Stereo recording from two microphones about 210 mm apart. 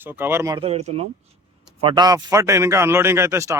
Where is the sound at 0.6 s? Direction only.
30° right (ahead or behind).